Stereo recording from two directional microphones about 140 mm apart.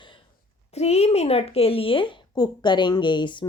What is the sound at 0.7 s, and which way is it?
Speech, 50° left (ahead or behind).